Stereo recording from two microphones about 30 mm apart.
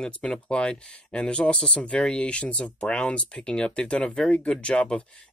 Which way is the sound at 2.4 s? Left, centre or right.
Left.